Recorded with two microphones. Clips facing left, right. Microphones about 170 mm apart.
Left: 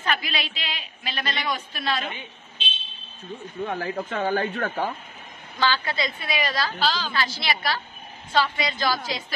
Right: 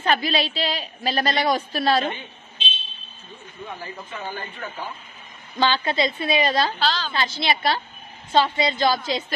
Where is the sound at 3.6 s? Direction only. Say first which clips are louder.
Left 7 dB; 85° left.